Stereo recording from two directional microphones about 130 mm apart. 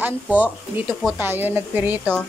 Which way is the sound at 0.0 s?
10° right (ahead or behind).